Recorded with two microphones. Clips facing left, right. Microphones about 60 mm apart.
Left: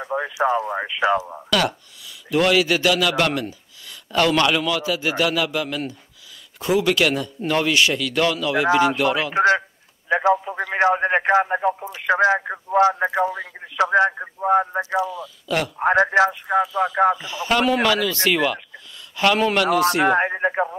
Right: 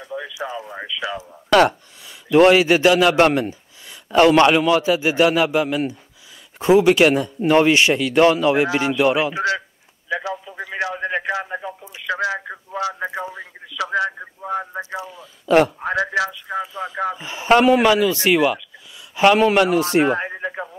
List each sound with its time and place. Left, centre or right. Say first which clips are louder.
0.0 s speech: left 7 dB; left
1.5 s a man's voice: right 7 dB; right
9.3 s speech: left 5 dB; left
14.1 s speech: left 8 dB; left
15.4 s speech: right 9 dB; right
15.8 s speech: left 5 dB; left
17.2 s a man's voice: right 5 dB; right
20.1 s speech: left 4 dB; left